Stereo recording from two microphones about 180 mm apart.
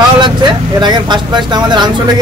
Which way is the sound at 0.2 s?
25° right (ahead or behind).